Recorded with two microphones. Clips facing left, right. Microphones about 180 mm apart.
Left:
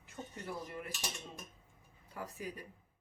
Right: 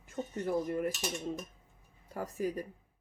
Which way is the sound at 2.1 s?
45° right (ahead or behind).